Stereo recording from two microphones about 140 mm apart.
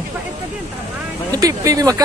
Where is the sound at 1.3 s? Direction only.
25° right (ahead or behind).